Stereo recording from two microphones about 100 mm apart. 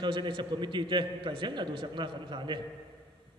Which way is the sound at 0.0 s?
50° right (ahead or behind).